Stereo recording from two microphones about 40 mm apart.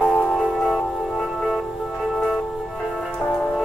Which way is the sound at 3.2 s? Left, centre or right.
Left.